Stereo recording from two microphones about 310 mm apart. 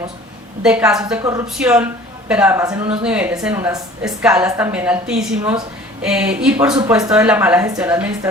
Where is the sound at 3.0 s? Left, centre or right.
Centre.